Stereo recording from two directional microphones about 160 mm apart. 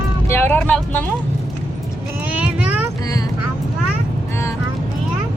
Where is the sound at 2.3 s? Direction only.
10° right (ahead or behind).